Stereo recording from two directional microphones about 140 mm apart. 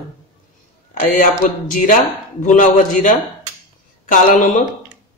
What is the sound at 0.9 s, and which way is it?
A man's voice, 75° left (ahead or behind).